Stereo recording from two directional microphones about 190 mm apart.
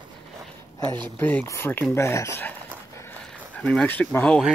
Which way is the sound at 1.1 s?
10° left (ahead or behind).